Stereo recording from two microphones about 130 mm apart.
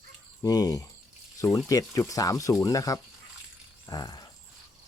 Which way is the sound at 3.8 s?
30° left (ahead or behind).